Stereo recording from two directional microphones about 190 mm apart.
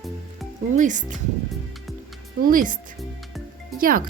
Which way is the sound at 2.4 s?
45° right (ahead or behind).